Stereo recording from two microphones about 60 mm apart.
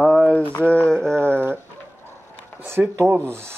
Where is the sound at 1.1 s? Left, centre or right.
Right.